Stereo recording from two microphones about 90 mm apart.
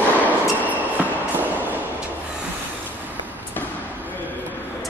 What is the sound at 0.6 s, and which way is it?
Train, 20° right (ahead or behind).